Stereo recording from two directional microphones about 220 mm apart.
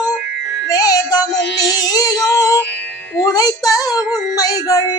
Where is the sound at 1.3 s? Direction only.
55° left (ahead or behind).